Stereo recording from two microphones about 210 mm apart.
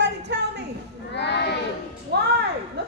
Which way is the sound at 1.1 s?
55° left (ahead or behind).